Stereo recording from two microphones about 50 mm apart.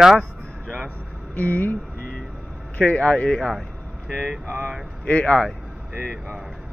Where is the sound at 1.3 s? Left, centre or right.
Left.